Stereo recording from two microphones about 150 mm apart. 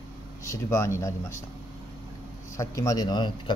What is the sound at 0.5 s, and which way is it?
Speech, 20° left (ahead or behind).